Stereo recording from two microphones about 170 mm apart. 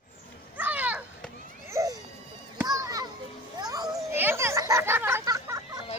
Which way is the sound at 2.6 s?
20° right (ahead or behind).